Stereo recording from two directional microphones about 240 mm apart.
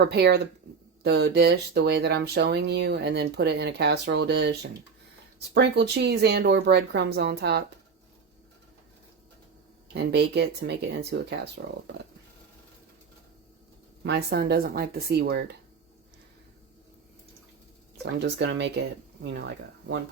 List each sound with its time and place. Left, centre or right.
0.0 s speech: right
9.9 s speech: right
14.0 s speech: right
18.2 s speech: right